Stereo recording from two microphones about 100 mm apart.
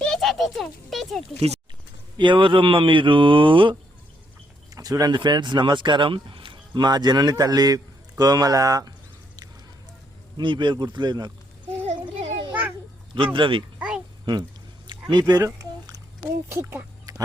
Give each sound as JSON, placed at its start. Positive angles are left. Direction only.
{"t": 0.0, "sound": "a sound", "side_deg": 5}
{"t": 2.1, "sound": "speech", "side_deg": -55}
{"t": 4.7, "sound": "speech", "side_deg": -40}
{"t": 10.3, "sound": "speech", "side_deg": -55}
{"t": 11.9, "sound": "a sound", "side_deg": -75}
{"t": 13.1, "sound": "speech", "side_deg": -60}
{"t": 13.7, "sound": "a sound", "side_deg": -10}
{"t": 15.1, "sound": "speech", "side_deg": -35}
{"t": 16.5, "sound": "speech", "side_deg": -25}